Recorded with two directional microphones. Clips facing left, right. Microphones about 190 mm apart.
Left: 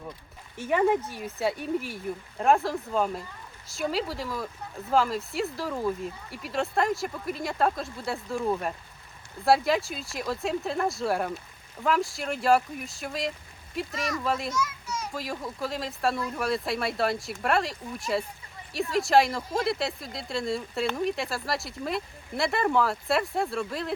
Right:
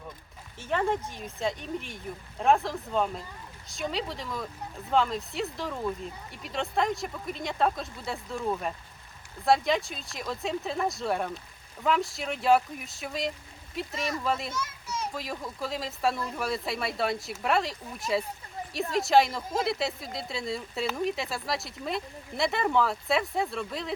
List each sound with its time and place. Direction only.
0.5 s speech: 10° left (ahead or behind)
14.5 s children playing: 30° right (ahead or behind)
15.1 s speech: centre (ahead or behind)